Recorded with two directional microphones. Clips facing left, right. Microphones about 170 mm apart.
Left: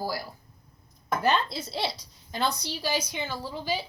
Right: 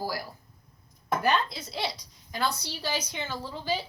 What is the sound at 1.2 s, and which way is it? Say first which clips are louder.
A woman's voice: left 2 dB; 30° left (ahead or behind).